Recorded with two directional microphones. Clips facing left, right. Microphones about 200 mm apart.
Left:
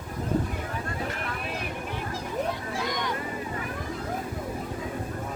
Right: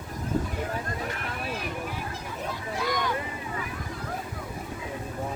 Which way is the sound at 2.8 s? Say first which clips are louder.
Right 3 dB; 20° left (ahead or behind).